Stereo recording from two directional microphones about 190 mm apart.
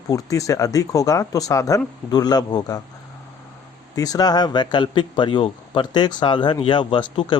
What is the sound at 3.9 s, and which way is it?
Speech, 20° left (ahead or behind).